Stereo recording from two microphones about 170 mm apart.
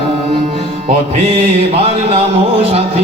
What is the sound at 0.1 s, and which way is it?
Music, 35° right (ahead or behind).